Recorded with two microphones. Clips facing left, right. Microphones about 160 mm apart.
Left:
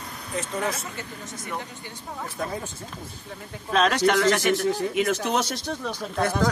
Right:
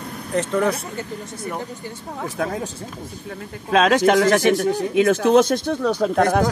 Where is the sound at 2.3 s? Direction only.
90° right.